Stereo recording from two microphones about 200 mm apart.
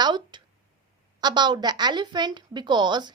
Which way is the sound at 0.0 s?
20° right (ahead or behind).